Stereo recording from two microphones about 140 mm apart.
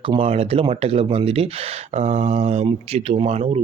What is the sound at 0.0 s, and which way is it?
Speech, 40° right (ahead or behind).